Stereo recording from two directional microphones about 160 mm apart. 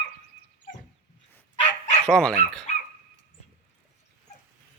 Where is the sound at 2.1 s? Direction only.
5° left (ahead or behind).